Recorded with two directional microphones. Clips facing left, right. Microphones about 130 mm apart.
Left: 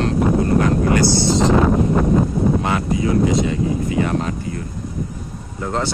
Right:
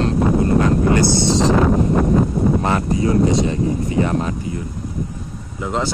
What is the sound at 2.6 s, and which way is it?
Speech, 35° right (ahead or behind).